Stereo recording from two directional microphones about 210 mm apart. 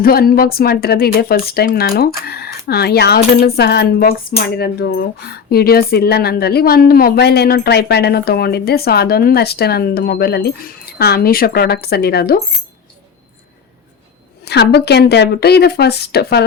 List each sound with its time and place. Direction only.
0.0 s speech: 45° left (ahead or behind)
14.4 s speech: 50° left (ahead or behind)